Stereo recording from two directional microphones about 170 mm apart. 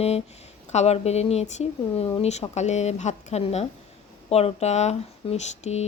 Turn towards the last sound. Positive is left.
turn(degrees=40)  # may be behind; listen again after turning